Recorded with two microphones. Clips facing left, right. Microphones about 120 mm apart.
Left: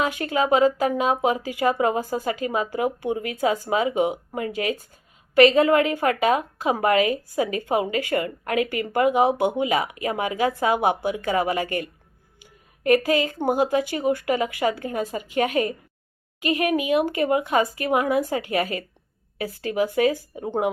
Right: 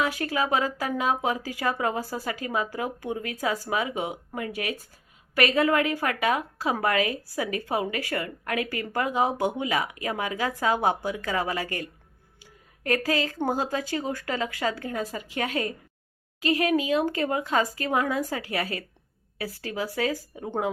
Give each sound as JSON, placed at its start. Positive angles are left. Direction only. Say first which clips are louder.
{"t": 0.0, "sound": "a woman's voice", "louder": "left 3 dB", "side_deg": 25}